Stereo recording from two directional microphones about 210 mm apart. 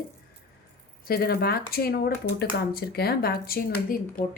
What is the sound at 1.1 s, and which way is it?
A woman's voice, 45° left (ahead or behind).